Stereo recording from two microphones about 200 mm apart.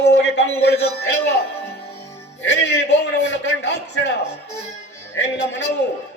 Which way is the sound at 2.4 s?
60° left (ahead or behind).